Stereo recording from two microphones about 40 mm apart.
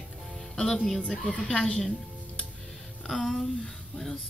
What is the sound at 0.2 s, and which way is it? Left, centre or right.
Music, centre.